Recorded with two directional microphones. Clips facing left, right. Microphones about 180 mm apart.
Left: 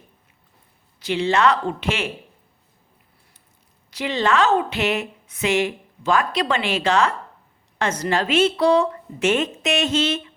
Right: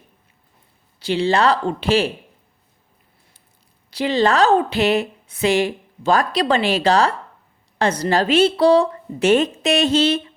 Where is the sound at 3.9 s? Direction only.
35° right (ahead or behind).